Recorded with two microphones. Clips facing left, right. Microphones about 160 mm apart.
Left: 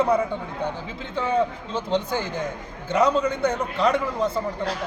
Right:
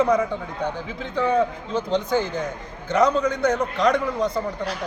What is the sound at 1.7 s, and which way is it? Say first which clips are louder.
Speech: right 1 dB; 30° left (ahead or behind).